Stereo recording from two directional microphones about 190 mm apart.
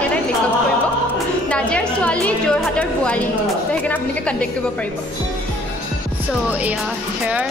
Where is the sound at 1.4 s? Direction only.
5° left (ahead or behind).